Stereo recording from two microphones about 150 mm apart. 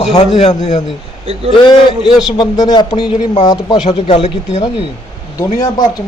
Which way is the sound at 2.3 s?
25° left (ahead or behind).